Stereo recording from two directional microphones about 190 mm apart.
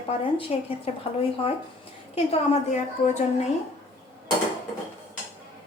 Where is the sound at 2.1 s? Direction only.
30° left (ahead or behind).